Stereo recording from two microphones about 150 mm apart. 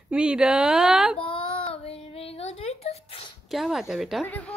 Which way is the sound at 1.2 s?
35° left (ahead or behind).